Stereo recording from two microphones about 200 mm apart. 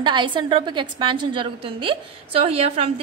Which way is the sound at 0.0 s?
25° right (ahead or behind).